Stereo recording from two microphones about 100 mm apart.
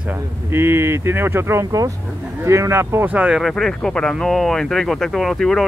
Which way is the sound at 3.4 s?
5° left (ahead or behind).